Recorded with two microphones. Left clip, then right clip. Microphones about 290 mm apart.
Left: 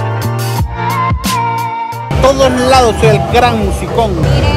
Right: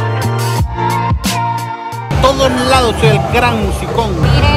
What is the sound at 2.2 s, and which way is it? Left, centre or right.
Speech, centre.